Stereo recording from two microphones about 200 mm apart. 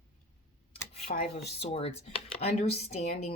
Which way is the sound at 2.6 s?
35° left (ahead or behind).